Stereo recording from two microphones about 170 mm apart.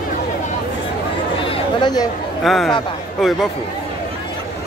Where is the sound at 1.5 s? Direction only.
25° left (ahead or behind).